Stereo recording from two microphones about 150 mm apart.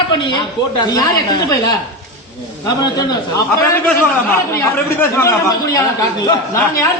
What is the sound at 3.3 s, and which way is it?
Speech, 20° left (ahead or behind).